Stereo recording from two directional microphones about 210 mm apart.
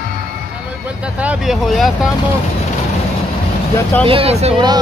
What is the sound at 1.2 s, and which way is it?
Speech, 5° right (ahead or behind).